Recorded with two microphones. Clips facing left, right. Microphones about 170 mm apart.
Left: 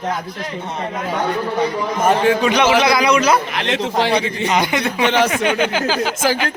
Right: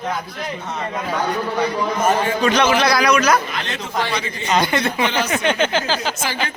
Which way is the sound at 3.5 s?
85° left.